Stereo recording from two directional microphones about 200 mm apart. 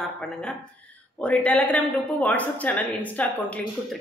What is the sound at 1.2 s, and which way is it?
A woman's voice, 5° left (ahead or behind).